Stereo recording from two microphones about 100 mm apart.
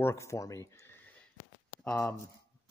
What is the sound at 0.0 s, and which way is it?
Speech, 30° left (ahead or behind).